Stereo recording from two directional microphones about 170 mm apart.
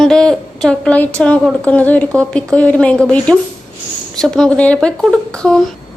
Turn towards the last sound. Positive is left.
turn(degrees=5)  # may be behind; listen again after turning